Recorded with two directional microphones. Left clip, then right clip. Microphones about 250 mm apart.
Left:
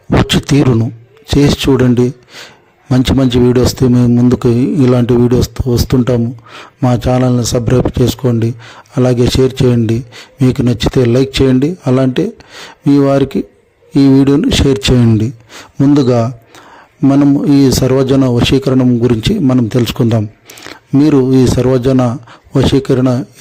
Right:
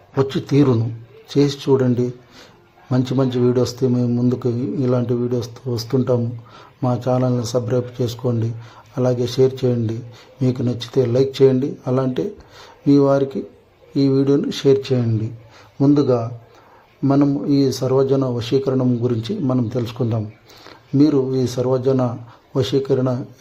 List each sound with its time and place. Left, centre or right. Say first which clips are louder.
0.3 s speech: left 6 dB; left